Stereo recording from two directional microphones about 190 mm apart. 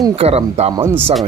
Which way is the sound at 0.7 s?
15° right (ahead or behind).